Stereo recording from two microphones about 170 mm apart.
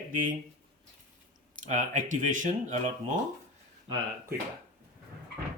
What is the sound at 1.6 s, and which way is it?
Speech, 50° right (ahead or behind).